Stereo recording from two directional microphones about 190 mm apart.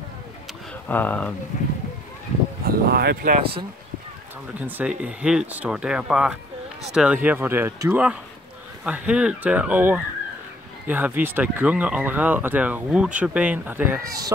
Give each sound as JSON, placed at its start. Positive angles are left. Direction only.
{"t": 0.8, "sound": "speech", "side_deg": 10}
{"t": 2.6, "sound": "speech", "side_deg": -55}
{"t": 4.6, "sound": "speech", "side_deg": -10}